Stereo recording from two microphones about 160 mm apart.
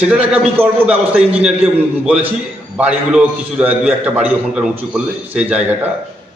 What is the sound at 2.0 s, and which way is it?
A man's voice, 5° right (ahead or behind).